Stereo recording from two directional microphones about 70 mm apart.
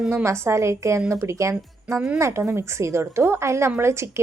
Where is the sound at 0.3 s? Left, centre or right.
Right.